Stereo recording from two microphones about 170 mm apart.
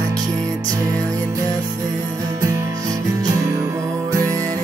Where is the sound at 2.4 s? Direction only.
15° right (ahead or behind).